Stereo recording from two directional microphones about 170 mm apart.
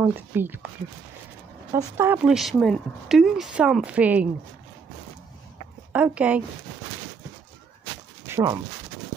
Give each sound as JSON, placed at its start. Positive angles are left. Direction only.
{"t": 0.0, "sound": "speech", "side_deg": -10}
{"t": 1.7, "sound": "speech", "side_deg": -15}
{"t": 2.2, "sound": "speech", "side_deg": 0}
{"t": 5.9, "sound": "speech", "side_deg": -10}
{"t": 8.3, "sound": "speech", "side_deg": -20}